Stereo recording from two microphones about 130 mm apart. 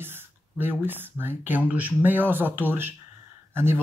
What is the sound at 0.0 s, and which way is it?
Speech, 15° right (ahead or behind).